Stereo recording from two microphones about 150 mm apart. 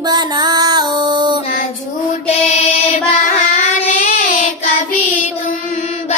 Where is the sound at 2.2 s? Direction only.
45° left (ahead or behind).